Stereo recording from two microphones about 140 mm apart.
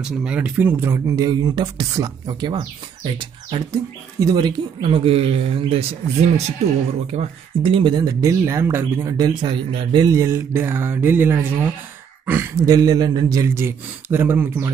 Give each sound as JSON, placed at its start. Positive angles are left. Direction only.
{"t": 0.0, "sound": "speech", "side_deg": -5}
{"t": 3.7, "sound": "speech", "side_deg": -25}
{"t": 7.6, "sound": "speech", "side_deg": -35}